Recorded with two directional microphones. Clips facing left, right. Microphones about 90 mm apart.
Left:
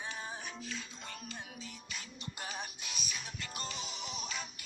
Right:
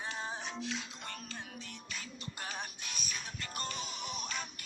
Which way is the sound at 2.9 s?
45° right (ahead or behind).